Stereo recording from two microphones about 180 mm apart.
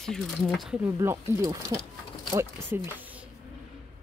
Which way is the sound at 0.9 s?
20° right (ahead or behind).